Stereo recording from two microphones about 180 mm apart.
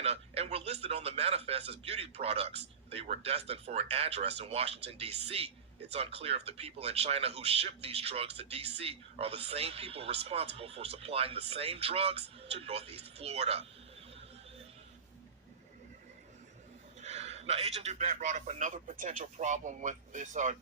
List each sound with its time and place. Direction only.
0.0 s a man's voice: 35° right (ahead or behind)
17.0 s speech: 35° right (ahead or behind)